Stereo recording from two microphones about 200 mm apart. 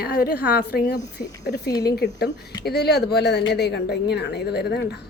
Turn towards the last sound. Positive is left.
turn(degrees=55)  # may be behind; listen again after turning